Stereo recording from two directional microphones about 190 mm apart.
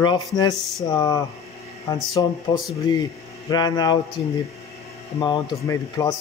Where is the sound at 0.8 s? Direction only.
20° left (ahead or behind).